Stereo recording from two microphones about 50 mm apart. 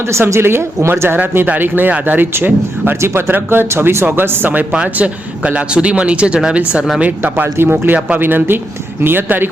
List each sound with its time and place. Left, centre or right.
0.1 s speech: right
1.5 s speech: right
4.7 s speech: right
7.6 s speech: right